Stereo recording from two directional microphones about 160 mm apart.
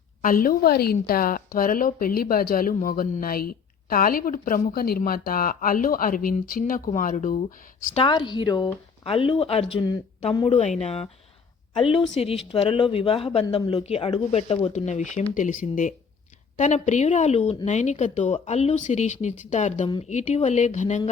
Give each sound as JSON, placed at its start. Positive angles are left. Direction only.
{"t": 0.2, "sound": "a woman's voice", "side_deg": 60}
{"t": 7.9, "sound": "a woman's voice", "side_deg": 30}